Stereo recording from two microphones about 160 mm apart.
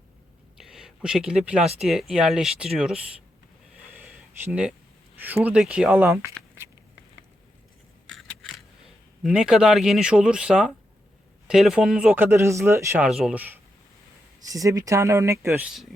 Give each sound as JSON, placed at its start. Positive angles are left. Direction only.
{"t": 0.6, "sound": "a sound", "side_deg": -5}
{"t": 1.8, "sound": "speech", "side_deg": 0}
{"t": 4.4, "sound": "a man's voice", "side_deg": -10}
{"t": 8.1, "sound": "a sound", "side_deg": 5}
{"t": 9.2, "sound": "a man's voice", "side_deg": -5}
{"t": 13.0, "sound": "a man's voice", "side_deg": 0}
{"t": 14.5, "sound": "speech", "side_deg": -20}